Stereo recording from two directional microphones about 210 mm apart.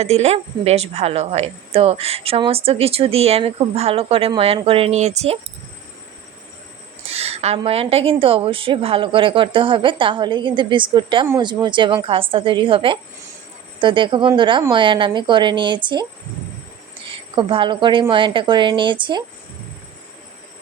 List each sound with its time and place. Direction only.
0.0 s speech: 30° right (ahead or behind)
7.1 s speech: 30° right (ahead or behind)
17.1 s speech: 25° right (ahead or behind)